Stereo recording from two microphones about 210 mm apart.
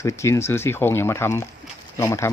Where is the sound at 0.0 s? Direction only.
15° left (ahead or behind).